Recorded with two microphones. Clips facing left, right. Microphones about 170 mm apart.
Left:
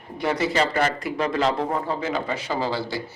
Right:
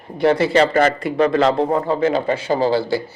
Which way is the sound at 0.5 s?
60° right (ahead or behind).